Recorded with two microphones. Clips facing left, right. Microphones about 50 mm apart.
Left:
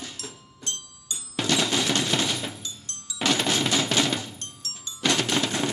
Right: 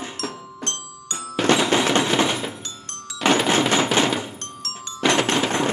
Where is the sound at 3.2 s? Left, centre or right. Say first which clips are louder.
Right 6 dB; right.